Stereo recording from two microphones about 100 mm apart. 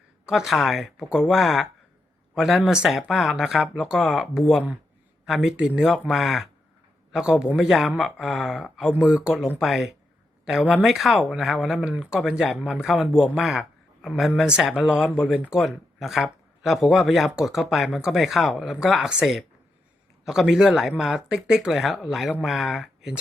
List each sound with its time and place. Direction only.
0.3 s speech: 5° right (ahead or behind)